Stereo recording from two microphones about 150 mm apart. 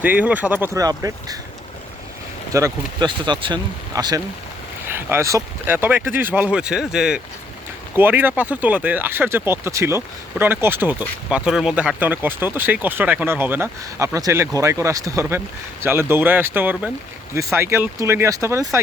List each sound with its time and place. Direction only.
0.0 s speech: 10° right (ahead or behind)
2.5 s speech: 20° right (ahead or behind)
3.1 s speech: 30° right (ahead or behind)
4.9 s speech: 15° right (ahead or behind)